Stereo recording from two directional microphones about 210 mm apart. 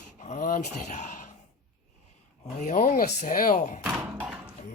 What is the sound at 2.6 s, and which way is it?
Speech, 40° left (ahead or behind).